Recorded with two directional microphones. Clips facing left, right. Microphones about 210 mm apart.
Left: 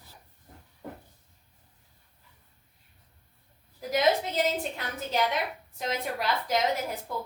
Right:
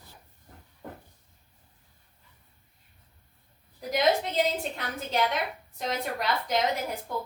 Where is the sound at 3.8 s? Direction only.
Centre (ahead or behind).